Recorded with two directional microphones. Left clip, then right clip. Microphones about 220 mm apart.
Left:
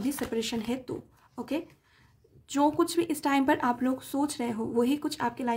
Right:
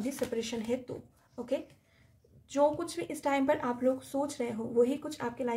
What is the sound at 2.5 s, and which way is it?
Speech, 45° left (ahead or behind).